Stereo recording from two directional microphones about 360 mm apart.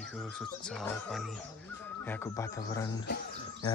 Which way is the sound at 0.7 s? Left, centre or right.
Centre.